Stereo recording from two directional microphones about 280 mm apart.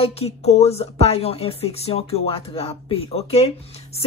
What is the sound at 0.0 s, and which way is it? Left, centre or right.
A woman's voice, left.